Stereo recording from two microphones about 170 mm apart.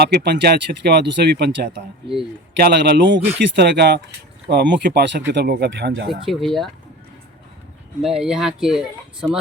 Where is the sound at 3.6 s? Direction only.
80° right.